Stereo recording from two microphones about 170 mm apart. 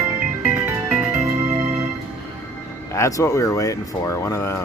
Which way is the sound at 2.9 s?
20° left (ahead or behind).